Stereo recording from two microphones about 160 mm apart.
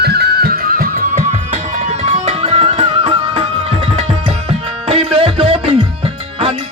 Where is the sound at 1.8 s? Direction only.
45° right (ahead or behind).